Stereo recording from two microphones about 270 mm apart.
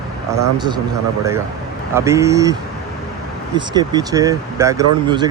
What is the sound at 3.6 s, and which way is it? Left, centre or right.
Speech, centre.